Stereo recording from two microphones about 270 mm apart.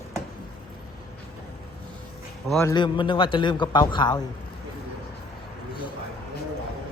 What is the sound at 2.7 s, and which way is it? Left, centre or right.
A man's voice, centre.